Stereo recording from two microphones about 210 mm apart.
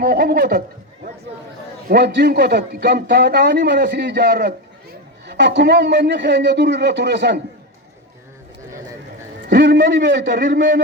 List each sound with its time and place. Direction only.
0.0 s a man's voice: 45° right (ahead or behind)
1.9 s a man's voice: 50° right (ahead or behind)
9.5 s a man's voice: 55° right (ahead or behind)